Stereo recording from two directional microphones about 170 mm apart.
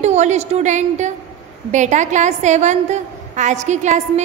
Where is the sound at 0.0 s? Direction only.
40° right (ahead or behind).